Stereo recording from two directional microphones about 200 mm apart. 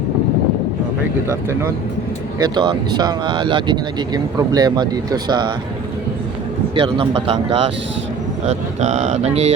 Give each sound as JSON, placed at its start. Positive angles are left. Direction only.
{"t": 2.4, "sound": "speech", "side_deg": -20}
{"t": 6.7, "sound": "speech", "side_deg": -25}